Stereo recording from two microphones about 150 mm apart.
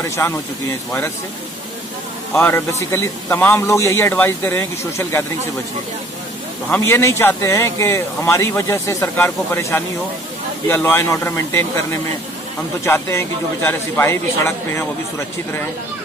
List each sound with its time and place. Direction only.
0.0 s speech: 20° left (ahead or behind)
2.3 s speech: 10° left (ahead or behind)
6.7 s speech: 20° left (ahead or behind)
12.8 s speech: 15° left (ahead or behind)